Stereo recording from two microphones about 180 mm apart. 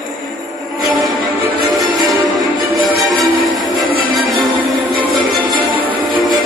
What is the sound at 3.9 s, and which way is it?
Music, 55° right (ahead or behind).